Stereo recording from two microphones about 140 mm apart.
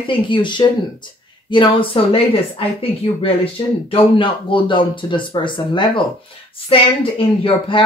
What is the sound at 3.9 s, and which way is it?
Speech, 35° left (ahead or behind).